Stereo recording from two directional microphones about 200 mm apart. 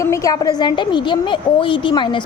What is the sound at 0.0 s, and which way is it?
A woman's voice, 15° left (ahead or behind).